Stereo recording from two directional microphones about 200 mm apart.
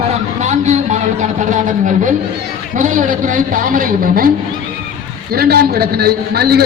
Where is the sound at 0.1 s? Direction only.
35° right (ahead or behind).